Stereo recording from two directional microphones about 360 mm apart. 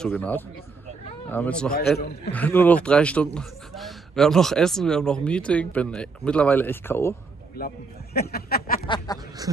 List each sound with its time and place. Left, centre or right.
0.0 s speech: centre
2.0 s a man's voice: left
2.3 s speech: centre
7.5 s a man's voice: left
8.8 s a sound: centre